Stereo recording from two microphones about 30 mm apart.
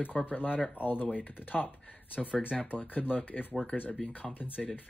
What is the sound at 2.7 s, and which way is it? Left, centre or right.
Speech, left.